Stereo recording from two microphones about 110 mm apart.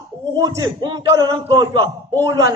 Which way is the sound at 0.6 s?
40° right (ahead or behind).